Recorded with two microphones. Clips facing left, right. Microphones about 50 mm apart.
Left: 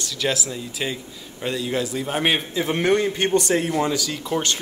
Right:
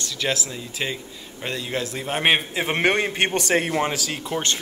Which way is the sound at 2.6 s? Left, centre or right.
Right.